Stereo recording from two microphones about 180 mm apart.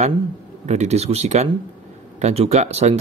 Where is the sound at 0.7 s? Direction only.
40° right (ahead or behind).